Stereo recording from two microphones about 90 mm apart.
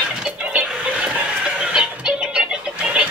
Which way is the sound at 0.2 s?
15° right (ahead or behind).